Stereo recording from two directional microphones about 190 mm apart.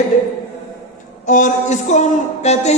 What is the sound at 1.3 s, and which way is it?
Music, 45° left (ahead or behind).